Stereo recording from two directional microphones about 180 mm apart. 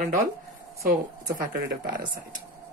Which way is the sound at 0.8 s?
55° right (ahead or behind).